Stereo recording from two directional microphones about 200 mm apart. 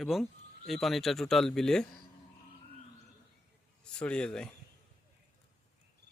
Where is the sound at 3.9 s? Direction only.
5° left (ahead or behind).